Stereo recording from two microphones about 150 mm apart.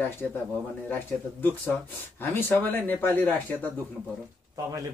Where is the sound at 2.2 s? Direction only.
15° left (ahead or behind).